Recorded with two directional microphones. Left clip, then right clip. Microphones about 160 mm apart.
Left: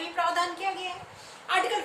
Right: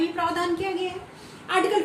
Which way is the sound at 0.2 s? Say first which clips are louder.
Left 2 dB; 15° left (ahead or behind).